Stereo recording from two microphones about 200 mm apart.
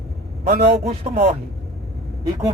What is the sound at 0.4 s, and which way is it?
Speech, 55° right (ahead or behind).